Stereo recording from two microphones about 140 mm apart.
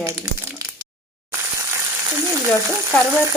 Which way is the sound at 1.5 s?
20° right (ahead or behind).